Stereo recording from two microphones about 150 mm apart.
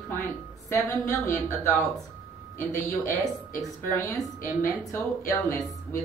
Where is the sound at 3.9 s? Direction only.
15° left (ahead or behind).